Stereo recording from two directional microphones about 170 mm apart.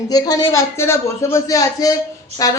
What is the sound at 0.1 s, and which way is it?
A man's voice, 20° left (ahead or behind).